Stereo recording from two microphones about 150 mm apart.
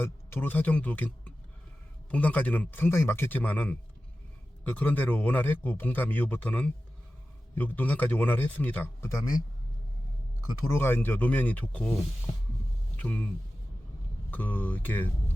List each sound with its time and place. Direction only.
0.0 s speech: 15° left (ahead or behind)
10.5 s speech: 15° left (ahead or behind)
12.3 s a sound: 35° left (ahead or behind)
13.0 s speech: 10° left (ahead or behind)